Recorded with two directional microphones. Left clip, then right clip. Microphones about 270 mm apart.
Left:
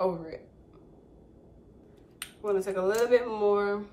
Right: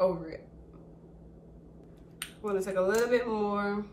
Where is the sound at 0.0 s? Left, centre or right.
Centre.